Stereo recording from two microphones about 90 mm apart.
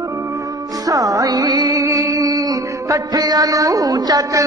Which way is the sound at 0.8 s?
40° right (ahead or behind).